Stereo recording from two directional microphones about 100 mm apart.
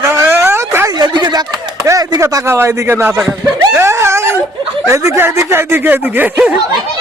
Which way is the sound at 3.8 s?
25° right (ahead or behind).